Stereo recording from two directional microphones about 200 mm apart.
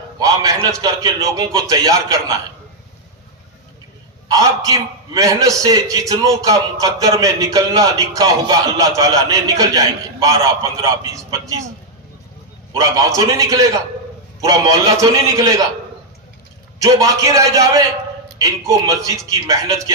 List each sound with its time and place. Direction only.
0.2 s a man's voice: 15° right (ahead or behind)
4.3 s a man's voice: 15° right (ahead or behind)
12.7 s a man's voice: 15° right (ahead or behind)
16.8 s a man's voice: 15° right (ahead or behind)